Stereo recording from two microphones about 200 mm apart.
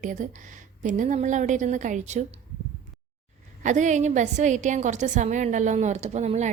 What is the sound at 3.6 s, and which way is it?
A woman's voice, 40° right (ahead or behind).